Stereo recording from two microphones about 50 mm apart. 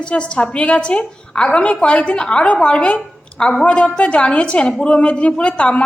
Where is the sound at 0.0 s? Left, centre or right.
Left.